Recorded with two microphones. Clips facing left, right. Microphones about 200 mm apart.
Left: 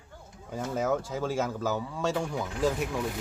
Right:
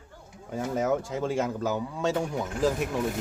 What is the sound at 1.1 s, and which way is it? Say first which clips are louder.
Speech: right 2 dB; centre (ahead or behind).